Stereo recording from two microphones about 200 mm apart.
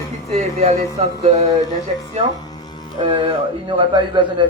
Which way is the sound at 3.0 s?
25° right (ahead or behind).